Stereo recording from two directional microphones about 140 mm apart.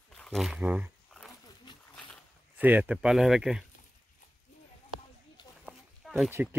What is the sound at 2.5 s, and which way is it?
Speech, 10° right (ahead or behind).